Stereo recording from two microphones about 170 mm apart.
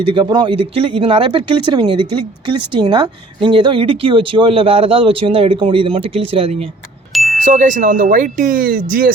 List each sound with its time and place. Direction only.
0.0 s speech: 30° right (ahead or behind)
7.1 s ding: centre (ahead or behind)
7.3 s speech: 50° right (ahead or behind)